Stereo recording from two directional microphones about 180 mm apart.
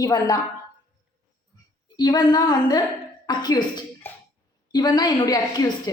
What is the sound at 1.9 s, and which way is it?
A woman's voice, 20° left (ahead or behind).